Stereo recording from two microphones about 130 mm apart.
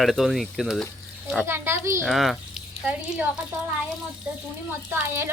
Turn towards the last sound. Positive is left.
turn(degrees=-20)  # may be behind; listen again after turning